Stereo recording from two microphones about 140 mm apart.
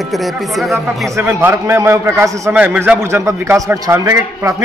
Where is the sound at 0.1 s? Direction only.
Centre (ahead or behind).